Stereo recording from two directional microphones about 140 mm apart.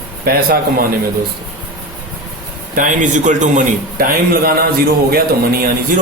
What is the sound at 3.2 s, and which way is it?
A man's voice, 60° right (ahead or behind).